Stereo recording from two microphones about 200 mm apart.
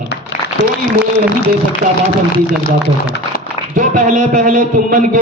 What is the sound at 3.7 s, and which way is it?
A man's voice, 40° right (ahead or behind).